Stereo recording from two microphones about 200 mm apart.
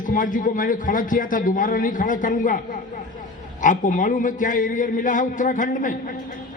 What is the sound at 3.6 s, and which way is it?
A man's voice, 40° left (ahead or behind).